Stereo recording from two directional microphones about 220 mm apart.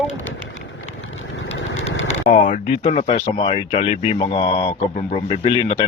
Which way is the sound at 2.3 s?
30° left (ahead or behind).